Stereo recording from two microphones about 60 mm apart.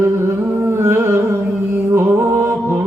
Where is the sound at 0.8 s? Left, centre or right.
Right.